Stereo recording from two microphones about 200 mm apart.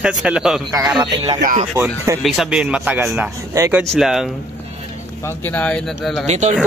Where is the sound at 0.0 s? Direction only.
5° right (ahead or behind).